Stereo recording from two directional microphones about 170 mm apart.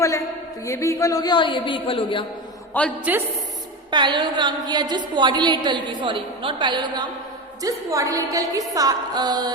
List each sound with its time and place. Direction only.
0.0 s a woman's voice: 20° left (ahead or behind)
3.0 s a woman's voice: 10° right (ahead or behind)
3.9 s a woman's voice: 25° right (ahead or behind)